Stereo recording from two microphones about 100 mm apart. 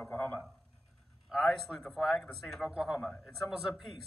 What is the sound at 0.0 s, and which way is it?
Speech, 20° left (ahead or behind).